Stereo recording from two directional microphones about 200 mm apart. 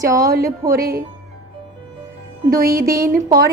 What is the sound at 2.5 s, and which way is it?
Music, 45° right (ahead or behind).